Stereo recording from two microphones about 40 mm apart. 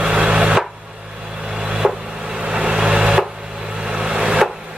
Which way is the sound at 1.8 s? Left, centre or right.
Centre.